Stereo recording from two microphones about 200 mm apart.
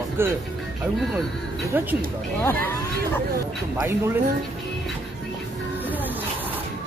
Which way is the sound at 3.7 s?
15° right (ahead or behind).